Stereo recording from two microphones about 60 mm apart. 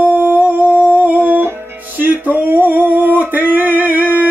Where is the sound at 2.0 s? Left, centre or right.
Right.